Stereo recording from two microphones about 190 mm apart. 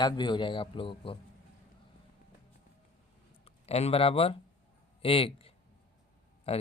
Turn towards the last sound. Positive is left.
turn(degrees=30)  # may be behind; listen again after turning